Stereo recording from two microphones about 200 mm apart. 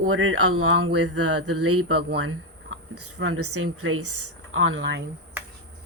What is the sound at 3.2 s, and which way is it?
A woman's voice, 90° right.